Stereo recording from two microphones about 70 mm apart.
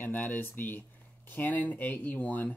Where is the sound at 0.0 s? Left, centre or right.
Left.